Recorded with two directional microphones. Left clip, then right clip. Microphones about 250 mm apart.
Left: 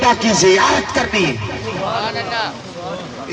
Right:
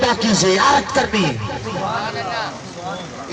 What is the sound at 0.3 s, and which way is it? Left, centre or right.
Speech, left.